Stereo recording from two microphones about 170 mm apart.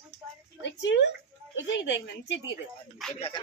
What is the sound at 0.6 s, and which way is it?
A woman's voice, 90° left.